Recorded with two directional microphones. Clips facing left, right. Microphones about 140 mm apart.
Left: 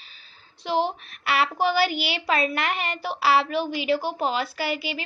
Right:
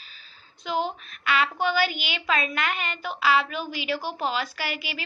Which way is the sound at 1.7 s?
40° left (ahead or behind).